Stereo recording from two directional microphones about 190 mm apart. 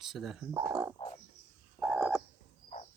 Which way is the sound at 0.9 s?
30° left (ahead or behind).